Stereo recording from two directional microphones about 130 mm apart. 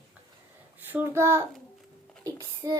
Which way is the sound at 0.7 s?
15° right (ahead or behind).